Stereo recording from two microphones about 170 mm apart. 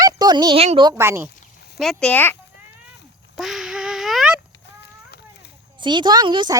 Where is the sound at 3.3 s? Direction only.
Centre (ahead or behind).